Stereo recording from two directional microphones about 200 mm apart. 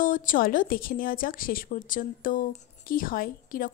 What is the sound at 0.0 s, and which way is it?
A woman's voice, 40° left (ahead or behind).